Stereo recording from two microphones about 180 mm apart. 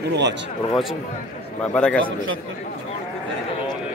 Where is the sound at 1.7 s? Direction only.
5° left (ahead or behind).